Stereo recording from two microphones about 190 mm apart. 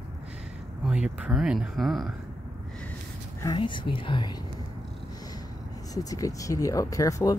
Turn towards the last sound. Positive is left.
turn(degrees=20)  # may be behind; listen again after turning